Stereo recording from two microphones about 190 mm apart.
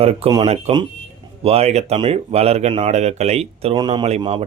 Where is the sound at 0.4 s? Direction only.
35° right (ahead or behind).